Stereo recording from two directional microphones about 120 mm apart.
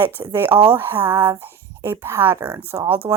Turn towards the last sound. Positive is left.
turn(degrees=-20)  # may be behind; listen again after turning